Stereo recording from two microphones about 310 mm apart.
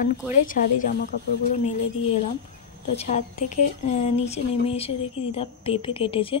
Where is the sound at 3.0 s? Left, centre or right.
Left.